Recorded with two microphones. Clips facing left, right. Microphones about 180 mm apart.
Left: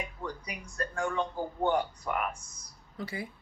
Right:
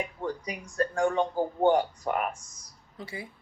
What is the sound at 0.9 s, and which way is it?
Speech, 30° right (ahead or behind).